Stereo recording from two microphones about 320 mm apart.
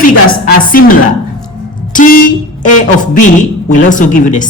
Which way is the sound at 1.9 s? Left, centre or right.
Left.